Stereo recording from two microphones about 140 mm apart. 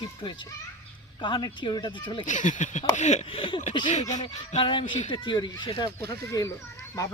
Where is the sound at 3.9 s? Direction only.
60° left (ahead or behind).